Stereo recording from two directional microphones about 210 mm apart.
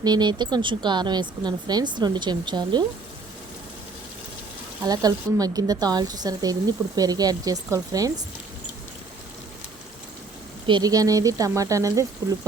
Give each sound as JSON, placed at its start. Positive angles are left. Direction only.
{"t": 0.0, "sound": "speech", "side_deg": -20}
{"t": 4.8, "sound": "speech", "side_deg": -20}
{"t": 10.7, "sound": "speech", "side_deg": -20}